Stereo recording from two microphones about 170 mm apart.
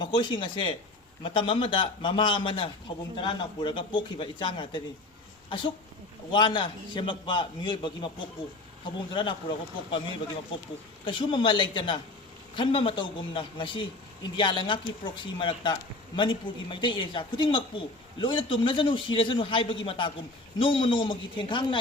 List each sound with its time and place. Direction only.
0.0 s a man's voice: 25° left (ahead or behind)
6.3 s a man's voice: 30° left (ahead or behind)
11.0 s a man's voice: 30° left (ahead or behind)